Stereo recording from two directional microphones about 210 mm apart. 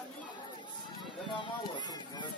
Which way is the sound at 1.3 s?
20° left (ahead or behind).